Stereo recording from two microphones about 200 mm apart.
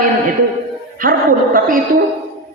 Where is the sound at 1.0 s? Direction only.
45° right (ahead or behind).